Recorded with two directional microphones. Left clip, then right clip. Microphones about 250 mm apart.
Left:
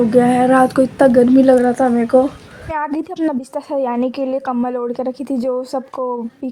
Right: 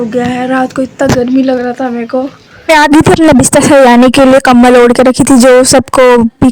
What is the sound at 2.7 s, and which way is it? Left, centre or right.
A woman's voice, right.